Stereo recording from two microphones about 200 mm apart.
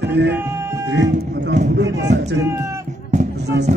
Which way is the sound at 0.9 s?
60° right (ahead or behind).